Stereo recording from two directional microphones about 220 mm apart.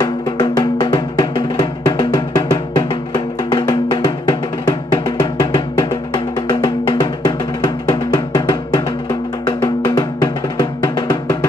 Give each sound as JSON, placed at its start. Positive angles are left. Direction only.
{"t": 0.0, "sound": "music", "side_deg": 20}
{"t": 9.6, "sound": "drum", "side_deg": 20}